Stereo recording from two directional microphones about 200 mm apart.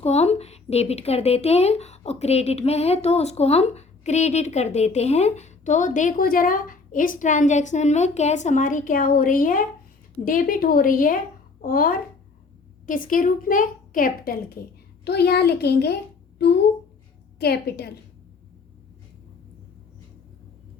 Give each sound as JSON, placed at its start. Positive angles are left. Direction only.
{"t": 0.0, "sound": "a woman's voice", "side_deg": 30}